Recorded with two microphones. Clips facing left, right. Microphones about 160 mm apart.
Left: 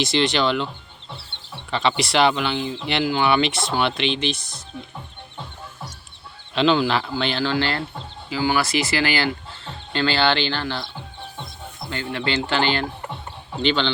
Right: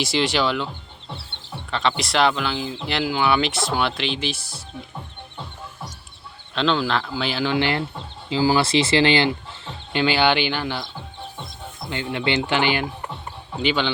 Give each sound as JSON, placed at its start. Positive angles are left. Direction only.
{"t": 0.0, "sound": "speech", "side_deg": -10}
{"t": 1.7, "sound": "speech", "side_deg": 0}
{"t": 6.5, "sound": "speech", "side_deg": 5}
{"t": 7.1, "sound": "speech", "side_deg": -5}
{"t": 7.5, "sound": "speech", "side_deg": -20}
{"t": 11.9, "sound": "speech", "side_deg": -20}